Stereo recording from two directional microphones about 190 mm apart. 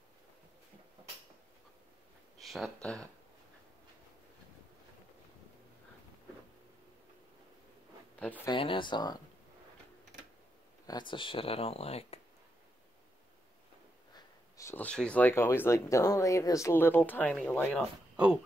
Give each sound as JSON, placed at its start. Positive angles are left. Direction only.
{"t": 2.3, "sound": "speech", "side_deg": 0}
{"t": 8.5, "sound": "speech", "side_deg": 25}
{"t": 10.9, "sound": "speech", "side_deg": 25}
{"t": 14.1, "sound": "speech", "side_deg": 15}